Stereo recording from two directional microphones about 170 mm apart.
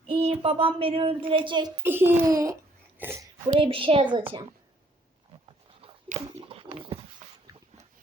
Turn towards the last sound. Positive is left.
turn(degrees=-35)  # may be behind; listen again after turning